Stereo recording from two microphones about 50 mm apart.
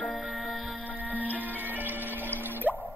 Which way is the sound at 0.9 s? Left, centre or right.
Right.